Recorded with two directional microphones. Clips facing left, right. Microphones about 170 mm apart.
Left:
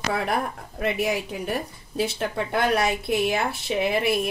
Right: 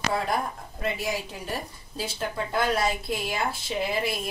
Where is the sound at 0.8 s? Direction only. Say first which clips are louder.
Left 5 dB; 65° left (ahead or behind).